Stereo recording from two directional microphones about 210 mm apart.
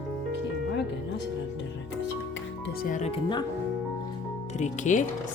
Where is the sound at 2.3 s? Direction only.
50° left (ahead or behind); by 3.4 s 25° left (ahead or behind).